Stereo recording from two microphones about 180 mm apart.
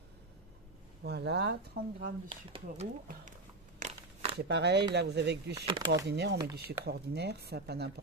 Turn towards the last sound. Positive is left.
turn(degrees=-65)  # may be behind; listen again after turning